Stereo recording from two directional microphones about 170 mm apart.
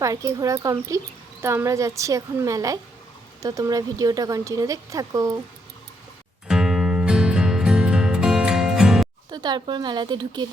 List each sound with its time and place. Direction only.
0.0 s speech: 20° right (ahead or behind)
6.5 s music: 5° right (ahead or behind)
9.3 s speech: 25° right (ahead or behind)